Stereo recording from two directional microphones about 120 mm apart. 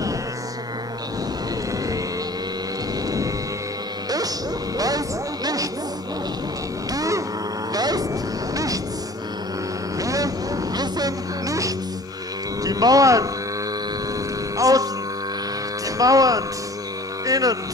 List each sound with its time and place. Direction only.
4.7 s music: 30° right (ahead or behind)
6.9 s cattle: 30° right (ahead or behind)
7.7 s vehicle: 30° right (ahead or behind)
9.9 s vehicle: 30° right (ahead or behind)
12.6 s hum: 30° right (ahead or behind)
14.6 s hum: 30° right (ahead or behind)
16.0 s hum: 30° right (ahead or behind)
17.3 s music: 30° right (ahead or behind)